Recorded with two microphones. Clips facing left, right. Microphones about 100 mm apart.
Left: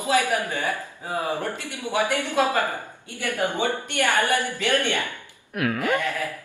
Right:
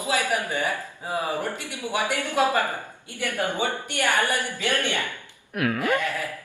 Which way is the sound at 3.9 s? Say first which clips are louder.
Left 2 dB; 20° left (ahead or behind).